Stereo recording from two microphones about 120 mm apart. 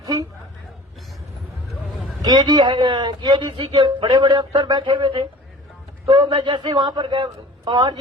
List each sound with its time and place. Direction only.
0.0 s a woman's voice: 30° right (ahead or behind)
2.2 s a man's voice: 35° right (ahead or behind)